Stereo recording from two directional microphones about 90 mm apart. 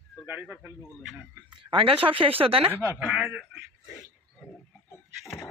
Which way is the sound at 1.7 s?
90° right.